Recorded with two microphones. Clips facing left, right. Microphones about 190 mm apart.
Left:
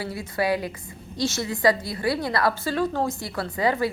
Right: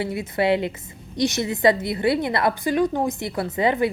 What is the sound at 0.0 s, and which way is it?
A woman's voice, 20° right (ahead or behind).